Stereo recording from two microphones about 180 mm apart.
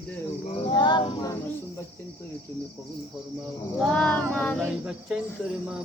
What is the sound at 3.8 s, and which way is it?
Speech, 5° left (ahead or behind).